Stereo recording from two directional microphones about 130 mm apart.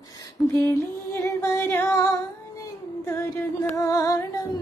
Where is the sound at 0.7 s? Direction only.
20° left (ahead or behind).